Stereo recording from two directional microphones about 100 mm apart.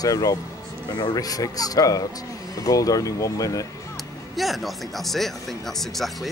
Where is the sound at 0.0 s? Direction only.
35° left (ahead or behind).